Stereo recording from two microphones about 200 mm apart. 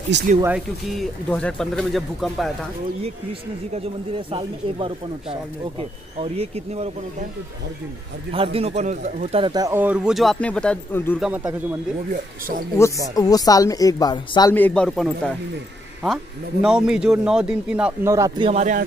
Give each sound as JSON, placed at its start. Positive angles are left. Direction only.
{"t": 0.1, "sound": "speech", "side_deg": -60}
{"t": 0.9, "sound": "speech", "side_deg": 5}
{"t": 4.3, "sound": "speech", "side_deg": -25}
{"t": 8.3, "sound": "speech", "side_deg": -30}
{"t": 11.1, "sound": "speech", "side_deg": -5}
{"t": 12.1, "sound": "speech", "side_deg": -45}
{"t": 13.1, "sound": "speech", "side_deg": 20}
{"t": 14.5, "sound": "speech", "side_deg": 5}
{"t": 16.6, "sound": "speech", "side_deg": -5}
{"t": 18.1, "sound": "speech", "side_deg": -15}
{"t": 18.5, "sound": "speech", "side_deg": -40}